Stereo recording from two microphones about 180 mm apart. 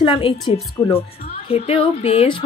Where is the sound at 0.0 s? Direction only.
25° left (ahead or behind).